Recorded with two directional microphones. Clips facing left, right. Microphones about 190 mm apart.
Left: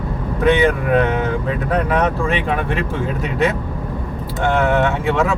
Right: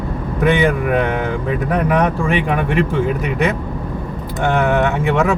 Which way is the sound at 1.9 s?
15° right (ahead or behind).